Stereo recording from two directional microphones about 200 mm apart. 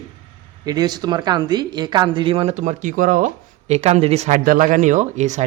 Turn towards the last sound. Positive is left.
turn(degrees=-35)  # may be behind; listen again after turning